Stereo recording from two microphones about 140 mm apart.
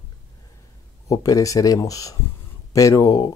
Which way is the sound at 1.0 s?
25° left (ahead or behind).